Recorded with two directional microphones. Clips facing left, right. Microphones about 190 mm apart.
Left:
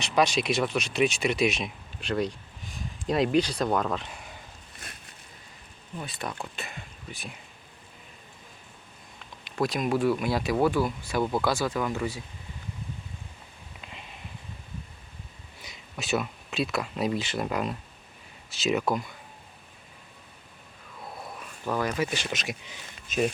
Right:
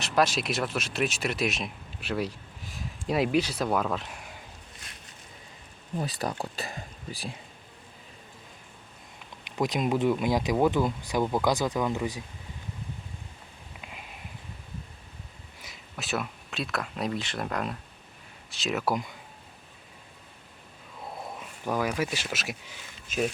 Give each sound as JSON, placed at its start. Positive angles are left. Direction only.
{"t": 0.0, "sound": "speech", "side_deg": -5}
{"t": 6.0, "sound": "speech", "side_deg": -35}
{"t": 9.4, "sound": "speech", "side_deg": -15}
{"t": 13.8, "sound": "a sound", "side_deg": -10}
{"t": 15.6, "sound": "speech", "side_deg": 0}
{"t": 21.3, "sound": "speech", "side_deg": -15}